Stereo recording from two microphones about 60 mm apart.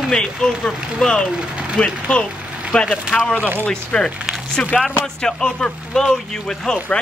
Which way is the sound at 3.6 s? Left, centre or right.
Centre.